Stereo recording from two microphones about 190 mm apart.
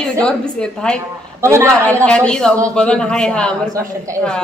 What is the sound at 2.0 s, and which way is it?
A woman's voice, 5° left (ahead or behind).